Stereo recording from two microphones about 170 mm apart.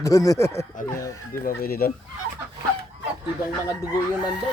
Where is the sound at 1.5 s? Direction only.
60° left (ahead or behind).